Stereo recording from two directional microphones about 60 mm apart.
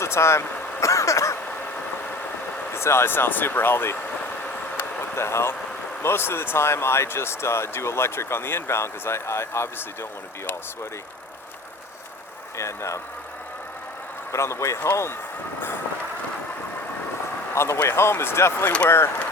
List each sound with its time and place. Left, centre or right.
0.0 s vehicle: left
2.7 s speech: left
4.8 s a sound: left
6.0 s speech: left
12.5 s speech: left
14.3 s speech: left
17.5 s speech: left